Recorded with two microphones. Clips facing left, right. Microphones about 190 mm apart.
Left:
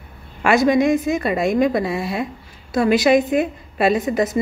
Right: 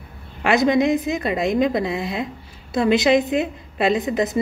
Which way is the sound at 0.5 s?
20° right (ahead or behind).